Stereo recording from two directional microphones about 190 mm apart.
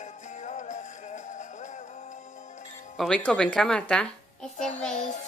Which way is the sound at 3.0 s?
5° left (ahead or behind).